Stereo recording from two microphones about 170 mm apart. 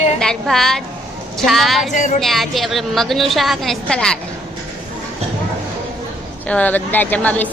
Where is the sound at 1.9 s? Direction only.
50° left (ahead or behind).